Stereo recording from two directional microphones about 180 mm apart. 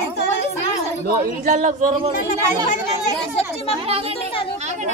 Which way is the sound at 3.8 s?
35° right (ahead or behind).